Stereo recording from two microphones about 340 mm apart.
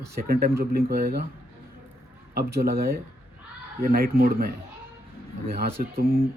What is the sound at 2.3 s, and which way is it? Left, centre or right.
Speech, right.